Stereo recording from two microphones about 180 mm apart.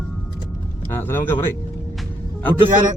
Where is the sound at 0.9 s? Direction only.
10° left (ahead or behind).